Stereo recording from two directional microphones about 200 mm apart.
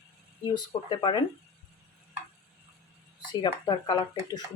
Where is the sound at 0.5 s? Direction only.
20° left (ahead or behind).